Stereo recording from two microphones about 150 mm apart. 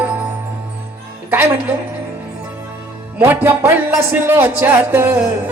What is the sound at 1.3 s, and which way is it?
Speech, 15° right (ahead or behind).